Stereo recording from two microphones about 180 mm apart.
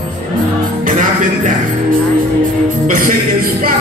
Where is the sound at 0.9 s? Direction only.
45° right (ahead or behind).